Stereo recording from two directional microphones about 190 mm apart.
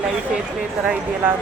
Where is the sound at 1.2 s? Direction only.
10° right (ahead or behind).